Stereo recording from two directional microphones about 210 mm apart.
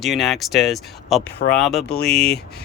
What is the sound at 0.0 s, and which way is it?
Speech, centre (ahead or behind).